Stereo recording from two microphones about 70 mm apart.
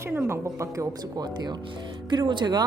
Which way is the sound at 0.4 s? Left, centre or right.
Right.